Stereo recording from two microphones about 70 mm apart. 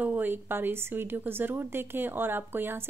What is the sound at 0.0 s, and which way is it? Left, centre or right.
A woman's voice, right.